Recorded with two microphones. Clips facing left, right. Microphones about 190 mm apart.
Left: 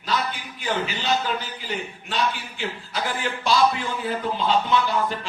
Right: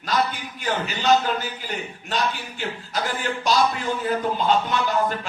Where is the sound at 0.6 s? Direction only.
45° right (ahead or behind).